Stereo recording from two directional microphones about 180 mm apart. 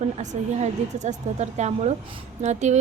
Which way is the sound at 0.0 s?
40° right (ahead or behind).